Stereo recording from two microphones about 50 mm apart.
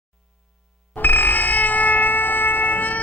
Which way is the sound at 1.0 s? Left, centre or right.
Left.